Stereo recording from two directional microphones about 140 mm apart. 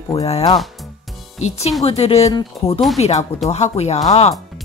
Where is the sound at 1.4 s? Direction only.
50° left (ahead or behind).